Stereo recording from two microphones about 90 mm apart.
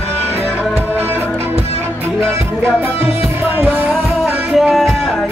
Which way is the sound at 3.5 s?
25° right (ahead or behind).